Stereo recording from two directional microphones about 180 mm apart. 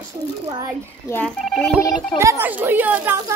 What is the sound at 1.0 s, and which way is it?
Speech, 10° left (ahead or behind).